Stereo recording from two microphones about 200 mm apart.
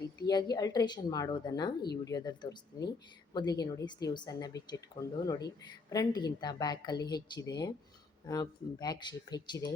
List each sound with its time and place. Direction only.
0.2 s speech: 20° left (ahead or behind)